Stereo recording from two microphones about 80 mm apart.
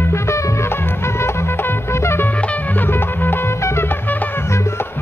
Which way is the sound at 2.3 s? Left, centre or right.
Centre.